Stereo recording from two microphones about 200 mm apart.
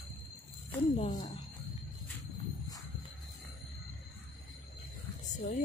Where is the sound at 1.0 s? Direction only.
35° left (ahead or behind).